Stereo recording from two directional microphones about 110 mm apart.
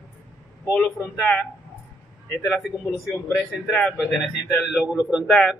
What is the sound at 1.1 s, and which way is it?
Speech, 10° left (ahead or behind).